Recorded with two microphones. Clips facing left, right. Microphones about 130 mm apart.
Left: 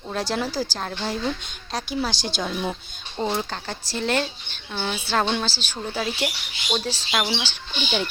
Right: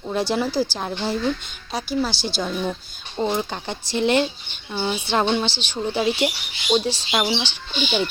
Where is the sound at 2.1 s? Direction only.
45° left (ahead or behind).